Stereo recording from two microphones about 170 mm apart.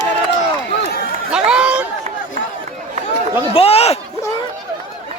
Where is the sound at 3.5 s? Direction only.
35° left (ahead or behind).